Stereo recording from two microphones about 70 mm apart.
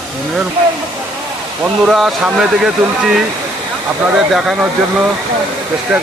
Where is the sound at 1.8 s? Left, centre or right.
Centre.